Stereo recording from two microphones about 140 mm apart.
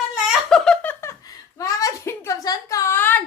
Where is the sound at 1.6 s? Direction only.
25° left (ahead or behind).